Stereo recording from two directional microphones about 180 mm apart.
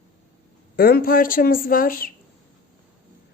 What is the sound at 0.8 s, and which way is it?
A woman's voice, 55° left (ahead or behind).